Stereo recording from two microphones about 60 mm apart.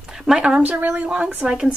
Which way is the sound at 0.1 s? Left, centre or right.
Centre.